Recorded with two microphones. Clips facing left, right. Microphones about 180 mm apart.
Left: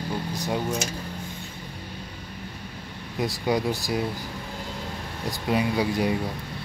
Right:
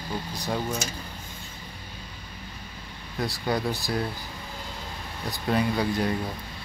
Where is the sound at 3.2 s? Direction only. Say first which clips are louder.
Left 3 dB; 15° left (ahead or behind).